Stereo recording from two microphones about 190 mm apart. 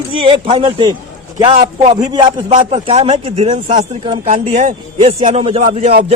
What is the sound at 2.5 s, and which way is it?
A man's voice, 35° right (ahead or behind).